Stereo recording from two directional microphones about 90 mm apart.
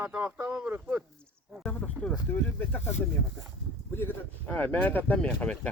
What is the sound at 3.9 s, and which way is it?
Speech, 25° left (ahead or behind).